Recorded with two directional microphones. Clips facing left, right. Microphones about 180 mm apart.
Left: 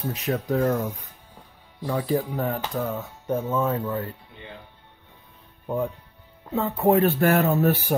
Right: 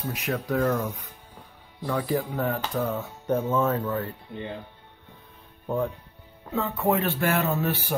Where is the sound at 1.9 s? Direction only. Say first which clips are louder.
Left 2 dB; 20° left (ahead or behind).